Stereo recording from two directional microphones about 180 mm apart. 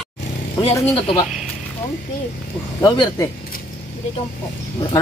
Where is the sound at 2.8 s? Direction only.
20° left (ahead or behind).